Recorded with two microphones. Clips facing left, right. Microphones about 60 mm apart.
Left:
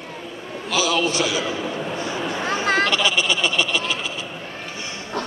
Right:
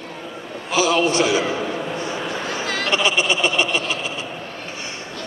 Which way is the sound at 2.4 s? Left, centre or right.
Left.